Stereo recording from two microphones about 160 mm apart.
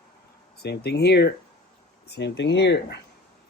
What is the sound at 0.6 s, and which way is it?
Speech, 90° left.